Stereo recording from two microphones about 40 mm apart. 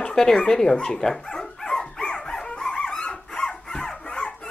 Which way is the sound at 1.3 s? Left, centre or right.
Centre.